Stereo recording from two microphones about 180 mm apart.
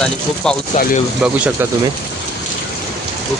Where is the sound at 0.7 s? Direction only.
45° left (ahead or behind).